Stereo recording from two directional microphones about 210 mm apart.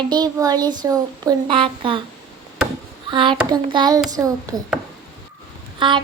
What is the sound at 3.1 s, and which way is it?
Child singing, 25° right (ahead or behind).